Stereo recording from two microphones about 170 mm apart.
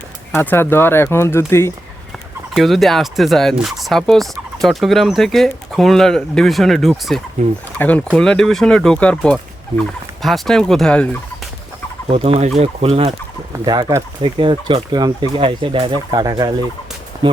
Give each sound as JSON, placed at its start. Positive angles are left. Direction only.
{"t": 0.3, "sound": "speech", "side_deg": 15}
{"t": 2.5, "sound": "speech", "side_deg": 0}
{"t": 12.0, "sound": "speech", "side_deg": -35}
{"t": 13.7, "sound": "speech", "side_deg": -25}